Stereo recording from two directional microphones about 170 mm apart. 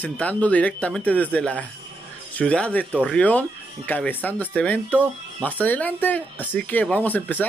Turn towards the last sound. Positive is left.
turn(degrees=10)  # may be behind; listen again after turning